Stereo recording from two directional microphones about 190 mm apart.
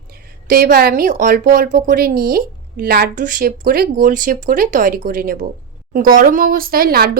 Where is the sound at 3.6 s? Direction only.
55° right (ahead or behind).